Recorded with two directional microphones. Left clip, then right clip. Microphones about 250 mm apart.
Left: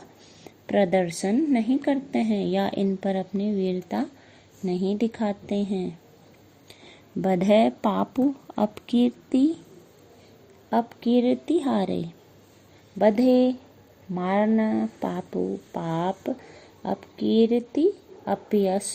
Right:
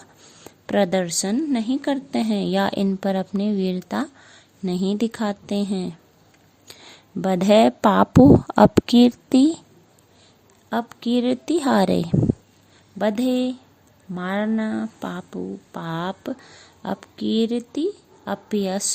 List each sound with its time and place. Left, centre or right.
0.4 s a woman's voice: right
7.2 s a woman's voice: right
10.7 s a woman's voice: right
13.0 s a woman's voice: right